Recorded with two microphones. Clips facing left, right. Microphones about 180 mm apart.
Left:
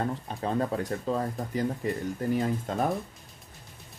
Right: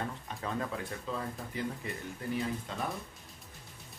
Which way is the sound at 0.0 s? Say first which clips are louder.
Left 7 dB; 35° left (ahead or behind).